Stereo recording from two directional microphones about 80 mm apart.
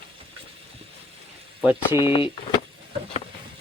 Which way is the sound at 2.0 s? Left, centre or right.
Left.